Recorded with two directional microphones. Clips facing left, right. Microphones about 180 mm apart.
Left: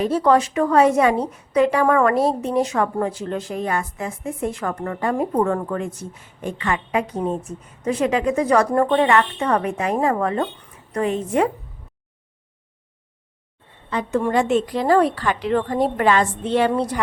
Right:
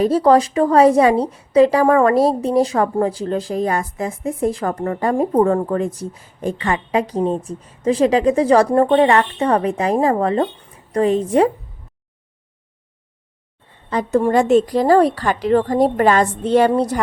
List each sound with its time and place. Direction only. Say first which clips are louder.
0.0 s a woman's voice: right 4 dB; 35° right (ahead or behind)
13.9 s a woman's voice: right 4 dB; 35° right (ahead or behind)